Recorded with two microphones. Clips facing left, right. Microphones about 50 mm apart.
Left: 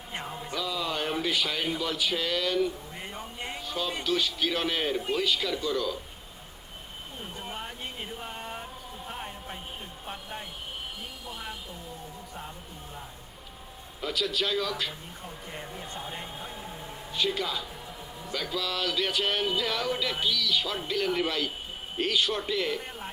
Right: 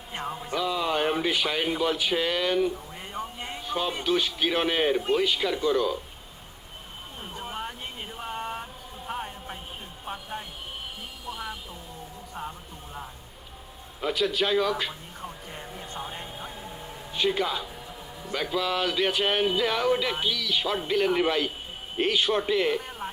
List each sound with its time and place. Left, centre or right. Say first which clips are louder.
0.5 s speech: right 5 dB; right
3.0 s a sound: right 2 dB; centre
3.6 s music: right 5 dB; right
4.0 s speech: right 2 dB; right
7.3 s a sound: right 5 dB; centre
10.1 s vehicle: right 4 dB; centre
14.0 s a man's voice: right 4 dB; right
15.5 s music: left 1 dB; centre
17.1 s a man's voice: right 4 dB; right